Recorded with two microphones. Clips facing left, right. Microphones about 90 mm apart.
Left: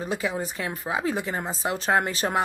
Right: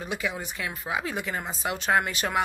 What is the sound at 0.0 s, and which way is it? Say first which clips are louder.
Speech: left 4 dB; 35° left (ahead or behind).